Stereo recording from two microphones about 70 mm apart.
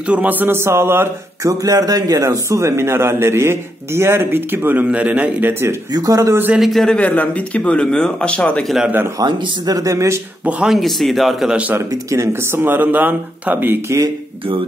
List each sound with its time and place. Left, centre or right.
0.0 s a man's voice: centre
0.6 s speech: right
1.4 s speech: right
4.8 s a man's voice: centre; by 5.8 s right
5.9 s speech: right
6.6 s speech: centre
6.9 s speech: centre
9.2 s speech: right
10.6 s speech: centre
11.5 s a man's voice: right
11.9 s speech: right
13.8 s speech: right